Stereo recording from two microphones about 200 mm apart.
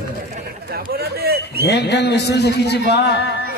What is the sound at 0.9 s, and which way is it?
Speech, 50° right (ahead or behind).